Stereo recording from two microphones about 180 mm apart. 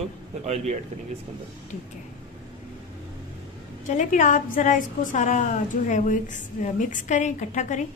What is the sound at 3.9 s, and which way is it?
A woman's voice, 45° left (ahead or behind).